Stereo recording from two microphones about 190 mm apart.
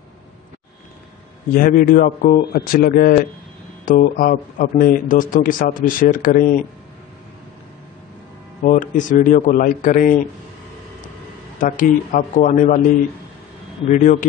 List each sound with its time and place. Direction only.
1.5 s speech: 50° left (ahead or behind)
8.6 s speech: 45° left (ahead or behind)
11.5 s speech: 45° left (ahead or behind)
13.8 s speech: 40° left (ahead or behind)